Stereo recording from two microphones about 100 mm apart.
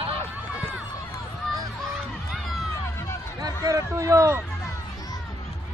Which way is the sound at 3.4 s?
35° right (ahead or behind).